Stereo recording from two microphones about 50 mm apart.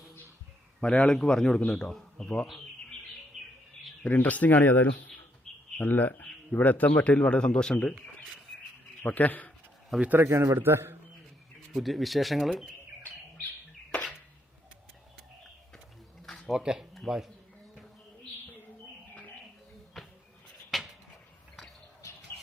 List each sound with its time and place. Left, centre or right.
0.8 s a man's voice: centre
3.3 s bird: centre
4.0 s speech: left
5.5 s bird: centre
5.8 s a man's voice: left; by 7.9 s centre
9.0 s speech: left
10.2 s a man's voice: right
11.7 s speech: centre
16.5 s speech: centre
20.0 s insect: centre
20.7 s a sound: centre